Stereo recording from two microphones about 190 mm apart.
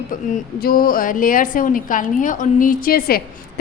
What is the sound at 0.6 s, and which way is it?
A woman's voice, 50° left (ahead or behind).